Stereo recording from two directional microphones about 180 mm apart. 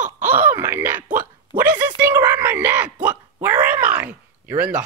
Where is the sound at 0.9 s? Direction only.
45° right (ahead or behind).